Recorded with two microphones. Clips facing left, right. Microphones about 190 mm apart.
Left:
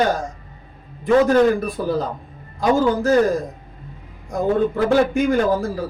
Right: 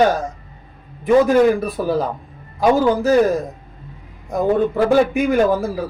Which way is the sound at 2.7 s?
10° right (ahead or behind).